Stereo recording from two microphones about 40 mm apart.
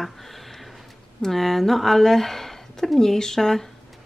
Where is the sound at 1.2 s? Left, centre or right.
Centre.